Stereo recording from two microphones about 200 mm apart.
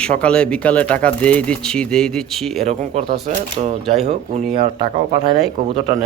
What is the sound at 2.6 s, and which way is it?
Speech, 30° right (ahead or behind).